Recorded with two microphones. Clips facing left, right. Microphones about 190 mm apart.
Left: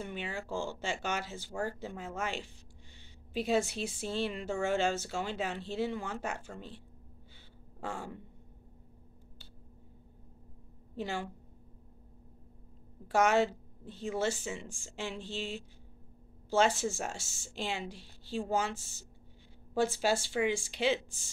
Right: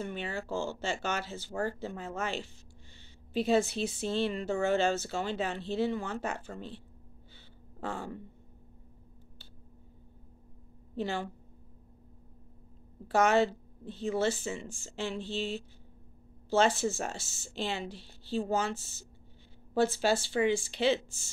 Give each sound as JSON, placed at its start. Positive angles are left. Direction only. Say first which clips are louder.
{"t": 0.0, "sound": "a woman's voice", "louder": "right 3 dB", "side_deg": 10}
{"t": 7.8, "sound": "speech", "louder": "right 2 dB", "side_deg": 10}
{"t": 11.0, "sound": "a woman's voice", "louder": "right 3 dB", "side_deg": 10}
{"t": 13.1, "sound": "a woman's voice", "louder": "right 2 dB", "side_deg": 10}